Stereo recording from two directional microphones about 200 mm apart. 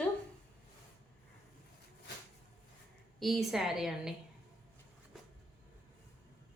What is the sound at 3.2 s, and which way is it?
Speech, centre (ahead or behind).